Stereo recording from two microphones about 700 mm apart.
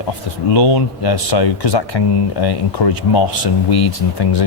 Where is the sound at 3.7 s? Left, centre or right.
Left.